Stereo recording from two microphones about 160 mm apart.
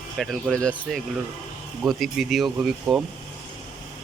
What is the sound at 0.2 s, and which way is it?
Speech, centre (ahead or behind).